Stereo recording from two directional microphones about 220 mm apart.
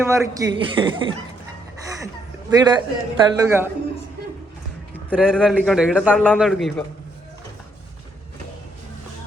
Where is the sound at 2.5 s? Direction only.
20° right (ahead or behind).